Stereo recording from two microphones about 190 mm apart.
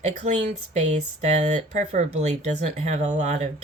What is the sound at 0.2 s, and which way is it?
Speech, 35° right (ahead or behind).